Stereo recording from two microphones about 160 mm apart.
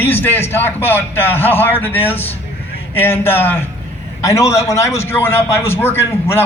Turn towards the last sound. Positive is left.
turn(degrees=15)  # may be behind; listen again after turning